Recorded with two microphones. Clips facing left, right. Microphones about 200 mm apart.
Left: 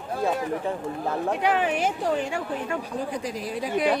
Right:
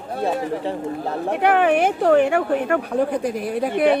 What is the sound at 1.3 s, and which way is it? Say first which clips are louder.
Speech: right 10 dB; 60° right (ahead or behind).